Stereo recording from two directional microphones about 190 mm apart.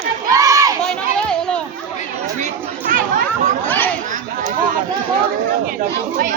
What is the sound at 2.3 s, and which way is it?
Chatter, 40° right (ahead or behind).